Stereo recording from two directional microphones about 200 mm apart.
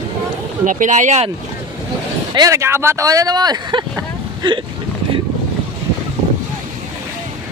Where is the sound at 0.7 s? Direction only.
40° right (ahead or behind).